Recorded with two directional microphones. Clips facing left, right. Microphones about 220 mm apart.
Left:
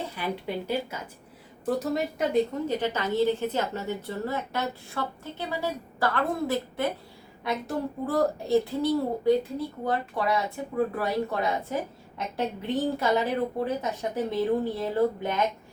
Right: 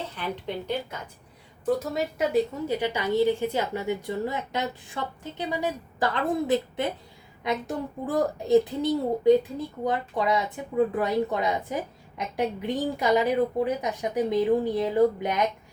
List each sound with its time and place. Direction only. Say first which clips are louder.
0.1 s a woman's voice: left 1 dB; 10° left (ahead or behind); by 6.9 s 20° right (ahead or behind)
8.0 s speech: right 1 dB; 15° right (ahead or behind)